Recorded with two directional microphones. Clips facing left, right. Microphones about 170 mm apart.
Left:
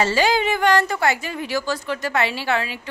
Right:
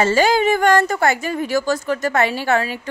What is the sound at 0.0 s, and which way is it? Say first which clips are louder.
A woman's voice: right 4 dB; 45° right (ahead or behind).